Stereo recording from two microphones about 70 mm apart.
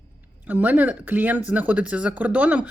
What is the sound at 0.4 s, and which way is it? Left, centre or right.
Speech, right.